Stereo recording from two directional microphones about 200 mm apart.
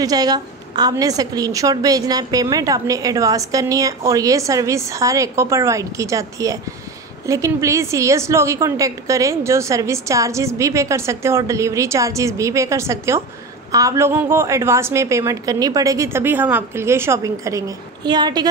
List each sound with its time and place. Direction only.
0.0 s a woman's voice: 20° right (ahead or behind)